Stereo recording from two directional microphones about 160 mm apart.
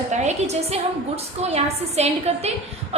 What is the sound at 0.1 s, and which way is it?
A woman's voice, 45° right (ahead or behind).